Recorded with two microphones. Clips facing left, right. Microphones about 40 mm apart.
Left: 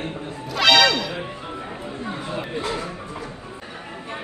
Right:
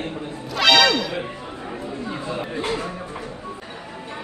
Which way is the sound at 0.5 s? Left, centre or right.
Centre.